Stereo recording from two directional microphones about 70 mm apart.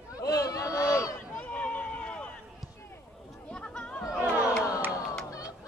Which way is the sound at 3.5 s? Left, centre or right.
Centre.